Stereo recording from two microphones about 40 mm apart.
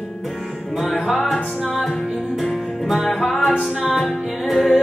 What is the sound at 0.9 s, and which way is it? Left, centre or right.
Music, centre.